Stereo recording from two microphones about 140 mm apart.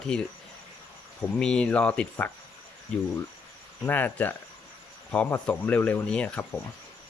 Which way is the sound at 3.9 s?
10° left (ahead or behind).